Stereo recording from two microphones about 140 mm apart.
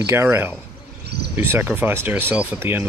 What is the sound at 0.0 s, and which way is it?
Speech, 20° right (ahead or behind).